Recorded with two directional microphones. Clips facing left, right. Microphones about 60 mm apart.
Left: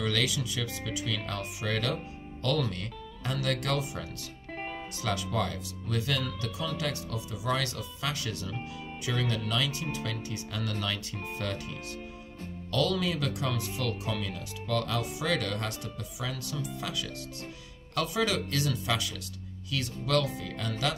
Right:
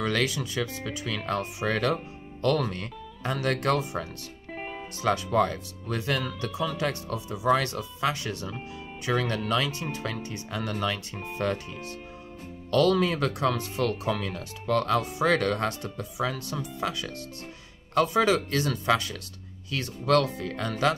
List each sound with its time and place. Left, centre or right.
0.0 s speech: right
4.5 s music: centre
5.0 s speech: right
9.0 s speech: right
12.7 s speech: right